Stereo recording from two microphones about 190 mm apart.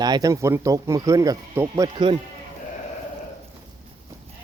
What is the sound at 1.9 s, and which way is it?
Speech, 25° right (ahead or behind).